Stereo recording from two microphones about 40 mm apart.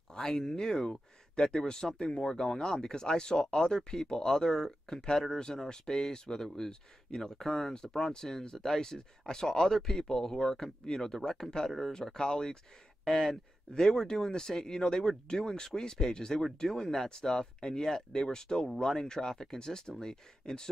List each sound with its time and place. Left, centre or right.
0.1 s speech: centre